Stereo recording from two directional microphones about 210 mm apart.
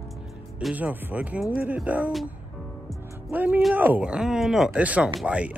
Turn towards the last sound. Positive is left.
turn(degrees=-5)  # may be behind; listen again after turning